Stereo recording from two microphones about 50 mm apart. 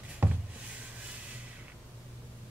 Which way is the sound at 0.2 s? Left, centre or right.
Right.